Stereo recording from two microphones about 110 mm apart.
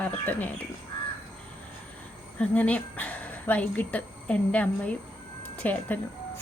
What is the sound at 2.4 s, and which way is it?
Speech, 15° left (ahead or behind).